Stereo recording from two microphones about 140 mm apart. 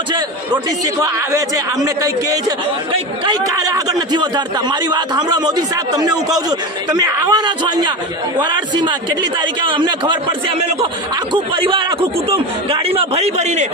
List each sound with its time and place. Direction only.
0.9 s speech: 25° right (ahead or behind)
3.3 s a man's voice: 25° right (ahead or behind)
11.5 s a man's voice: 40° right (ahead or behind)